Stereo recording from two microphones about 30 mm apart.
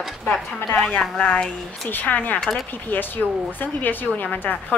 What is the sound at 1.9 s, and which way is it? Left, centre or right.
Speech, left.